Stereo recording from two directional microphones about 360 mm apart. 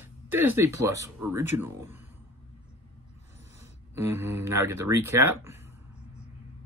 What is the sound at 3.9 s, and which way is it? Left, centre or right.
Speech, centre.